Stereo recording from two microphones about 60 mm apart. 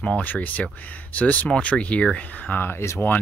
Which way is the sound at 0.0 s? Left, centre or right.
Left.